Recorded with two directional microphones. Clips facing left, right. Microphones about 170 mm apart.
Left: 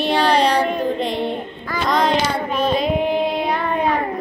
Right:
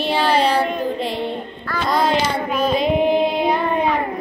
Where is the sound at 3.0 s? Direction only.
15° right (ahead or behind).